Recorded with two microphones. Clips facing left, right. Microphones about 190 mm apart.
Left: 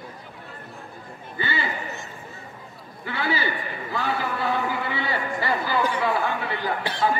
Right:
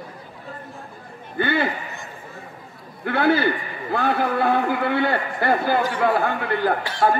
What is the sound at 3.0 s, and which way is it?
A man's voice, 55° right (ahead or behind).